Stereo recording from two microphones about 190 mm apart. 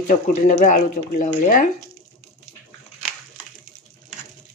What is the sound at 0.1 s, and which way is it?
Speech, 40° left (ahead or behind).